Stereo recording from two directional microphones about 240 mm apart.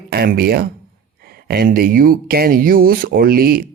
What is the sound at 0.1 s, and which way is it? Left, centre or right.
Speech, right.